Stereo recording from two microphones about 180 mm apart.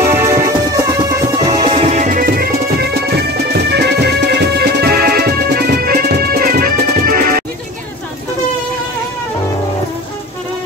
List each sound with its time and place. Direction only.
0.1 s music: 15° right (ahead or behind)
1.8 s music: 40° right (ahead or behind)